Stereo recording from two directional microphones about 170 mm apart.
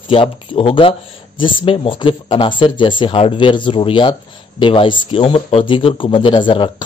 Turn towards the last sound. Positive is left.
turn(degrees=30)  # may be behind; listen again after turning